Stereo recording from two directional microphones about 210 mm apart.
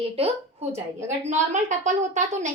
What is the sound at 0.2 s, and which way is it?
A woman's voice, 30° right (ahead or behind).